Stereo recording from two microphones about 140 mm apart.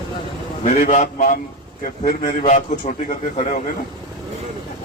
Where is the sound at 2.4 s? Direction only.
60° left (ahead or behind).